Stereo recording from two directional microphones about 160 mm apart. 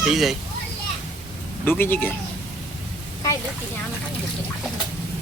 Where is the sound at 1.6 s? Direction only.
10° left (ahead or behind).